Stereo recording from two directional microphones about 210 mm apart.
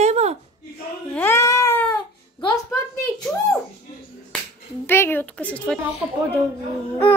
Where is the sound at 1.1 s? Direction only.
10° left (ahead or behind).